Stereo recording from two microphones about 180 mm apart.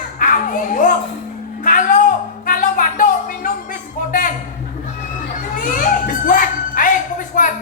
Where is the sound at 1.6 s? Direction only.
45° left (ahead or behind).